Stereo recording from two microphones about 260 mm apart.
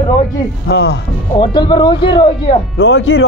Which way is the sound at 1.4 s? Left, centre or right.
Centre.